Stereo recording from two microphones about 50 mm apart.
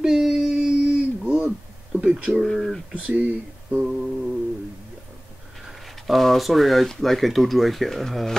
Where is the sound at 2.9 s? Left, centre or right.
Right.